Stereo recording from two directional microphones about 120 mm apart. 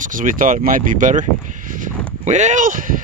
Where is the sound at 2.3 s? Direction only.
85° right.